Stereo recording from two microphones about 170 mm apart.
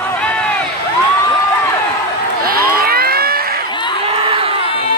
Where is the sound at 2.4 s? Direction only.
60° right (ahead or behind).